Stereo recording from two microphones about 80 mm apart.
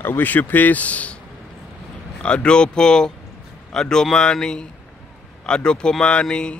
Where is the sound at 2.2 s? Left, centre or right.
Centre.